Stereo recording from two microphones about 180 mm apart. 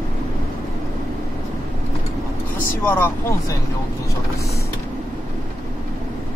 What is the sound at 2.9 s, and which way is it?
Speech, 10° left (ahead or behind).